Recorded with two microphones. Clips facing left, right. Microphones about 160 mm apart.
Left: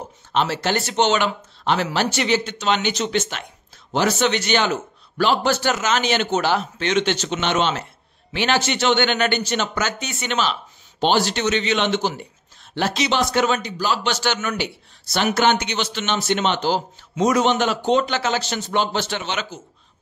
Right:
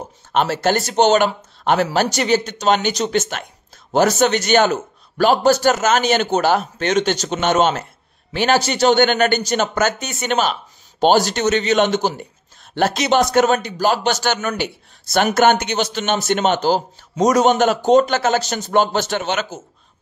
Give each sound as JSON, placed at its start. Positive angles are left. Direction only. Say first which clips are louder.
{"t": 0.3, "sound": "speech", "louder": "right 4 dB", "side_deg": -50}